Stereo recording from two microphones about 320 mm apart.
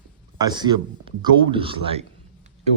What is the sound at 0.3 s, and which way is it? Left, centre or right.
Speech, centre.